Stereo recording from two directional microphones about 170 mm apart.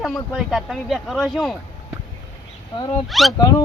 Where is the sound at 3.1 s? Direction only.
Centre (ahead or behind).